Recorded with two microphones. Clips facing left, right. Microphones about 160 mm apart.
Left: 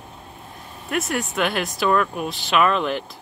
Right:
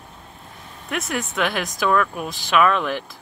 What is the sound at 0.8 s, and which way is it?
Speech, centre (ahead or behind).